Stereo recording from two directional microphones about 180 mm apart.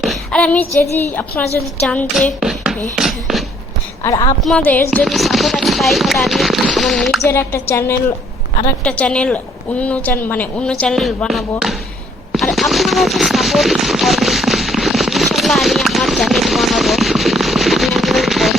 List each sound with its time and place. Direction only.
0.0 s child singing: centre (ahead or behind)
0.9 s speech: 10° left (ahead or behind)
2.4 s beatboxing: centre (ahead or behind)
2.9 s a sound: centre (ahead or behind)
4.0 s speech: 20° left (ahead or behind)
4.4 s speech: 10° left (ahead or behind)
7.3 s speech: 15° left (ahead or behind)
12.3 s a sound: centre (ahead or behind)